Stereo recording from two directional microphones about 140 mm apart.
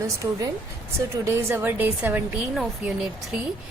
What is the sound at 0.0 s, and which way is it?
A woman's voice, 25° right (ahead or behind).